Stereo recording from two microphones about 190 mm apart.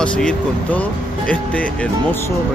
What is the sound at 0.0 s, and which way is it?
Speech, 5° left (ahead or behind).